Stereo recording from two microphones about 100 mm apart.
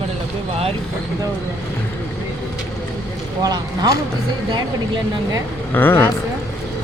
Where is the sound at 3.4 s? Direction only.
40° right (ahead or behind).